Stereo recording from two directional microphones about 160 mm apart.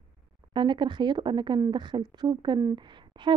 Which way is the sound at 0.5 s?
30° right (ahead or behind).